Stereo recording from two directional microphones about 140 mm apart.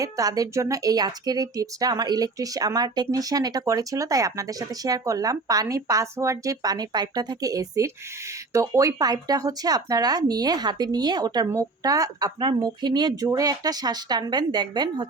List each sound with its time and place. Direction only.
0.0 s a woman's voice: 25° right (ahead or behind)